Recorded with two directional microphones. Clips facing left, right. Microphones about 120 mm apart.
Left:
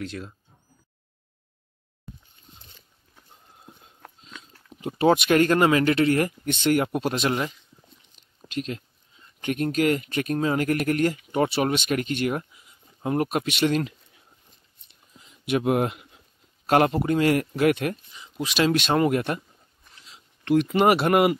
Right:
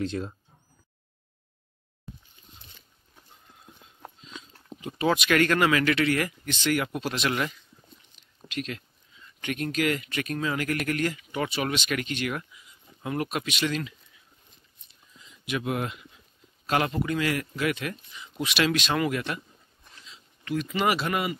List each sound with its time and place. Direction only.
0.0 s speech: 30° right (ahead or behind)
4.8 s speech: 45° left (ahead or behind)
5.3 s speech: 30° left (ahead or behind)
6.4 s a man's voice: 55° left (ahead or behind)
7.2 s speech: 25° left (ahead or behind)
8.5 s speech: 35° left (ahead or behind)
15.1 s a sound: 55° left (ahead or behind)
16.6 s a man's voice: 50° left (ahead or behind)
18.1 s a sound: 35° left (ahead or behind)
18.8 s a man's voice: 45° left (ahead or behind)
20.1 s speech: 60° left (ahead or behind)